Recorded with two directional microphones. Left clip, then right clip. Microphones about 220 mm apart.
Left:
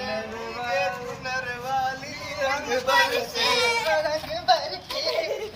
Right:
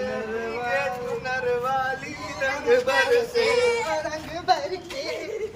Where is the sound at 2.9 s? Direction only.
30° left (ahead or behind).